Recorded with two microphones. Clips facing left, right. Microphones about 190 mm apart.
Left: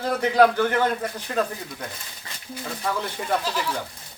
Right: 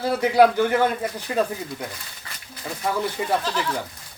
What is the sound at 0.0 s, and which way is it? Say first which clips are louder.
Speech: right 2 dB; 10° right (ahead or behind).